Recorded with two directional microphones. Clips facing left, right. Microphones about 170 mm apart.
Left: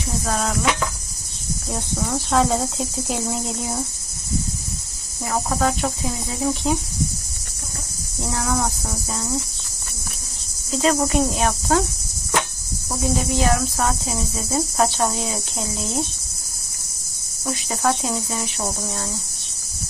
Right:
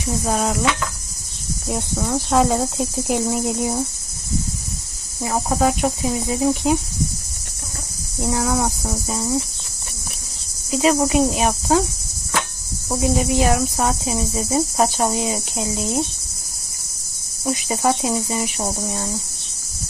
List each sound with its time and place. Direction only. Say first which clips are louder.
0.3 s cricket: right 3 dB; 10° right (ahead or behind)
1.7 s cricket: right 3 dB; 10° right (ahead or behind)
5.2 s cricket: right 3 dB; 15° right (ahead or behind)
8.2 s cricket: right 3 dB; 10° right (ahead or behind)
10.7 s cricket: right 2 dB; 10° right (ahead or behind)
13.0 s cricket: right 3 dB; 10° right (ahead or behind)
17.4 s cricket: right 3 dB; 15° right (ahead or behind)